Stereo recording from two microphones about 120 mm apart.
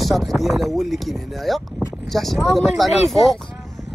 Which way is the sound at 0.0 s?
Centre (ahead or behind).